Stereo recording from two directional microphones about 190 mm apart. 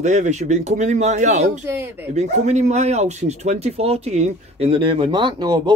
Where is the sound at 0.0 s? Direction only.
40° right (ahead or behind).